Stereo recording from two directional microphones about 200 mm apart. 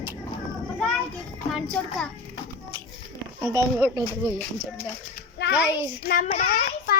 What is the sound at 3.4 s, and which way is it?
Speech, 15° left (ahead or behind).